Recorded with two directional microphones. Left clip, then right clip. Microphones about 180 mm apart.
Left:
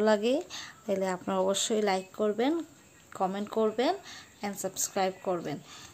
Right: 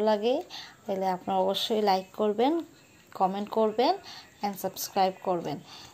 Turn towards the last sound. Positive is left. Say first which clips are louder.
# right 3 dB
turn(degrees=10)  # may be behind; listen again after turning